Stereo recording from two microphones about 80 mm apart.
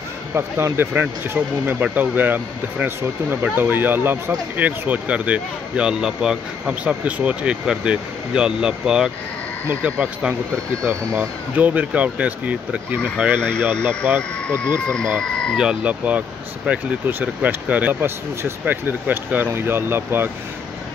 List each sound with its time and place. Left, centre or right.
0.3 s speech: right; by 9.1 s centre
9.7 s speech: right
14.5 s speech: centre
15.5 s speech: centre; by 20.2 s right